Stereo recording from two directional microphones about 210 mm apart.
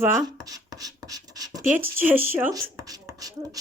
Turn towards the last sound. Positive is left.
turn(degrees=-15)  # may be behind; listen again after turning